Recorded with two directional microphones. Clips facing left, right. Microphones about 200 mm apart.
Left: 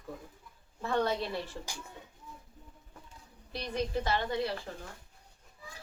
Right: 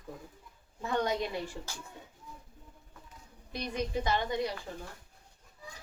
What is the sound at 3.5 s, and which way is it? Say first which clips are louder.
Speech: even; 15° right (ahead or behind).